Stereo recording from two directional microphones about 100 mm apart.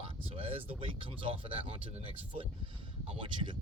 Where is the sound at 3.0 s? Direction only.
65° right (ahead or behind).